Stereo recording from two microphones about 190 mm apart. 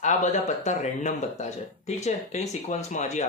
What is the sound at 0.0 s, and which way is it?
Speech, 40° left (ahead or behind).